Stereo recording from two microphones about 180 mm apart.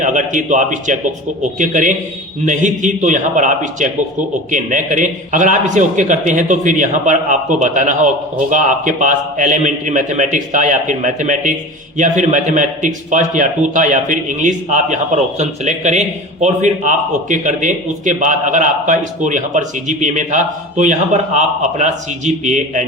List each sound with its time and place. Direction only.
0.0 s a man's voice: 45° right (ahead or behind)